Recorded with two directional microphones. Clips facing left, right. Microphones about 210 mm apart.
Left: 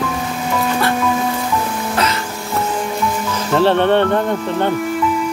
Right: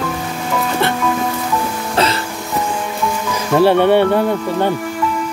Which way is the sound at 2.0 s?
30° right (ahead or behind).